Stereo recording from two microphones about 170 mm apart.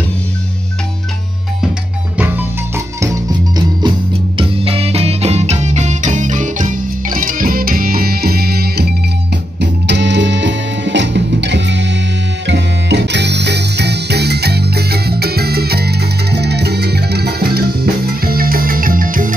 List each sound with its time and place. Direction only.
2.1 s music: 10° right (ahead or behind)
4.4 s music: 35° right (ahead or behind); by 8.8 s 65° right (ahead or behind)
9.6 s music: 90° right; by 19.3 s 55° right (ahead or behind)